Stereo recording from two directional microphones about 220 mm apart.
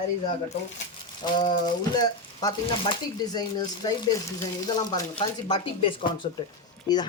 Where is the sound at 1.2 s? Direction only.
20° left (ahead or behind).